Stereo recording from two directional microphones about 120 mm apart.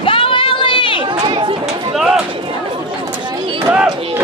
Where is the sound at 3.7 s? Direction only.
15° right (ahead or behind).